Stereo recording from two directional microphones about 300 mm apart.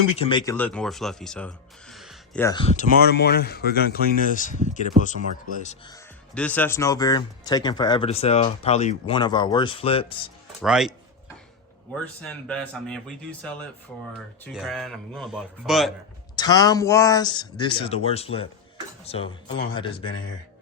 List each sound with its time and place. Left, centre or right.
0.2 s speech: centre
5.9 s speech: centre
10.6 s speech: centre
12.2 s speech: centre
16.3 s speech: centre